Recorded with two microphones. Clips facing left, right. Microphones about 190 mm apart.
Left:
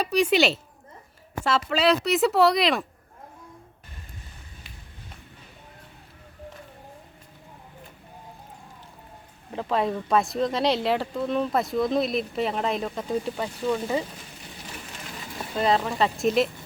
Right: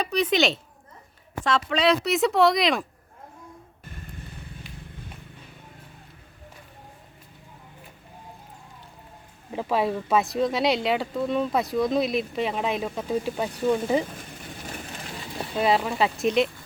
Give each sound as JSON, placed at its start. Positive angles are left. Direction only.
{"t": 0.0, "sound": "speech", "side_deg": 10}
{"t": 9.5, "sound": "speech", "side_deg": -10}
{"t": 13.3, "sound": "speech", "side_deg": -15}
{"t": 14.5, "sound": "a sound", "side_deg": -50}
{"t": 15.5, "sound": "speech", "side_deg": -5}